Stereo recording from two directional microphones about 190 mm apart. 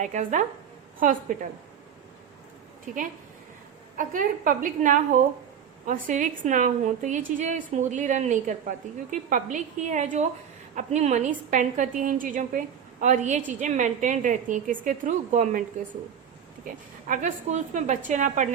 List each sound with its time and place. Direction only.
0.0 s a woman's voice: 40° right (ahead or behind)
3.9 s a woman's voice: 45° right (ahead or behind)
16.6 s a woman's voice: 45° right (ahead or behind)